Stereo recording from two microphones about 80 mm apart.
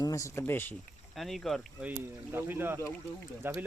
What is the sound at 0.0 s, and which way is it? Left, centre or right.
Speech, left.